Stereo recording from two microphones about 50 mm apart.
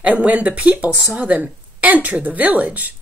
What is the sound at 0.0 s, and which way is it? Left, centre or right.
A woman's voice, right.